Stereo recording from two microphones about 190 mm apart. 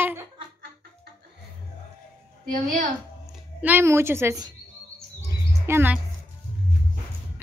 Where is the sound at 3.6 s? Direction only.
10° right (ahead or behind).